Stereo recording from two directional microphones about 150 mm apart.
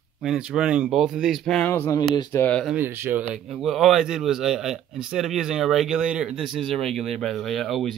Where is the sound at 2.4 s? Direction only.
10° left (ahead or behind).